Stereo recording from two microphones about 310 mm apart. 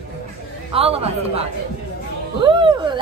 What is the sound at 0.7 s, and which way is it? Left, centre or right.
Speech, centre.